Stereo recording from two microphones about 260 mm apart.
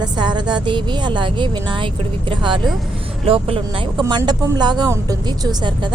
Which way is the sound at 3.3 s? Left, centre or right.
Right.